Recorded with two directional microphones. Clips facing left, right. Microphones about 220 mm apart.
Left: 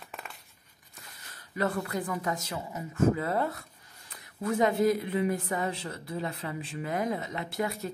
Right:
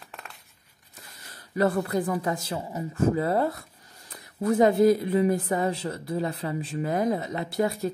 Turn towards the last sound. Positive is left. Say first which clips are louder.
# right 6 dB
turn(degrees=-35)  # may be behind; listen again after turning